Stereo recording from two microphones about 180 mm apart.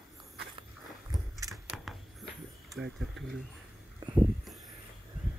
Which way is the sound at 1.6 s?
Centre (ahead or behind).